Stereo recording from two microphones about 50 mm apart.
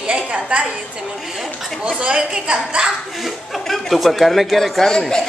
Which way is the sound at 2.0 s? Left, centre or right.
Centre.